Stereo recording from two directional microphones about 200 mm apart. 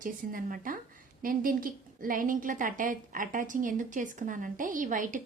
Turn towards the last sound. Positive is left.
turn(degrees=-40)  # may be behind; listen again after turning